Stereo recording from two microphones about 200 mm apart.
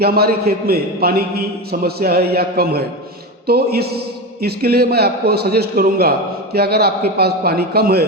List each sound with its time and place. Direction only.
0.0 s a man's voice: 50° right (ahead or behind)